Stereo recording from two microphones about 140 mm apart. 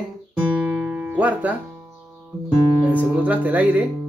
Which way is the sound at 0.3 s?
10° right (ahead or behind).